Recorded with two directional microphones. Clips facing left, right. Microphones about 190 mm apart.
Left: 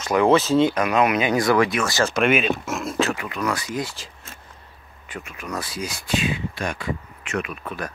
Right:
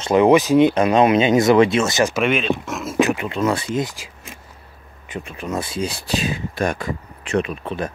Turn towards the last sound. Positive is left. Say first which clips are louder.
# right 5 dB
turn(degrees=-25)  # may be behind; listen again after turning